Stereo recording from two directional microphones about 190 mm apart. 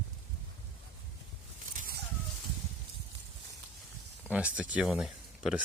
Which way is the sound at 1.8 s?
50° right (ahead or behind).